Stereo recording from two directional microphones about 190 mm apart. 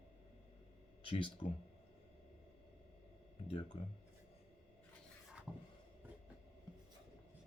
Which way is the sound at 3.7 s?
30° left (ahead or behind).